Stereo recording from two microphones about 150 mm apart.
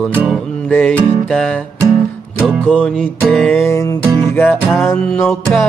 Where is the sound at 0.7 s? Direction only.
10° left (ahead or behind).